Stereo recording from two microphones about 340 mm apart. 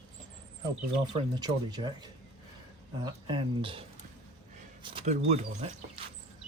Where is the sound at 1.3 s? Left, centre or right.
Centre.